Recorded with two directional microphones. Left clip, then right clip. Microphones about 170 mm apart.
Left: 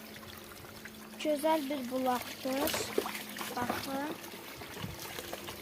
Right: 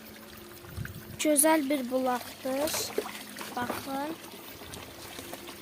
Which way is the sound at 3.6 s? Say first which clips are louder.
Right 2 dB; 45° right (ahead or behind).